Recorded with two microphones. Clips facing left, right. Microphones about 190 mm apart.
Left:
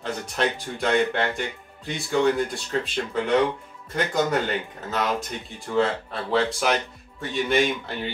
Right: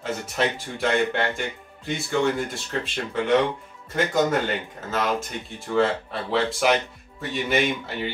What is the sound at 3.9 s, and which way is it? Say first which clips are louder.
Speech: right 2 dB; centre (ahead or behind).